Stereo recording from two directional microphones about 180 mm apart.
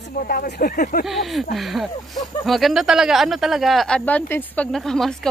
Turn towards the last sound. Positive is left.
turn(degrees=0)  # may be behind; listen again after turning